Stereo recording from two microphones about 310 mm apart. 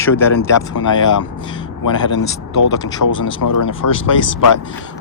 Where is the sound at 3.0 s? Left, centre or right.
Left.